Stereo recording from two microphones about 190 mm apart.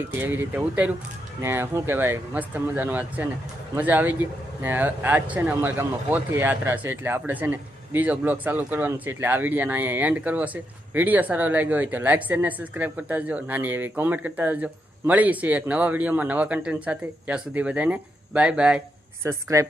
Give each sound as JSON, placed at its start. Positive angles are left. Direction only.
{"t": 0.1, "sound": "speech", "side_deg": -10}
{"t": 19.2, "sound": "speech", "side_deg": -15}